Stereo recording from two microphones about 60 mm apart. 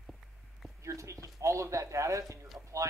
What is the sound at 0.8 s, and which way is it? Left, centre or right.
Speech, right.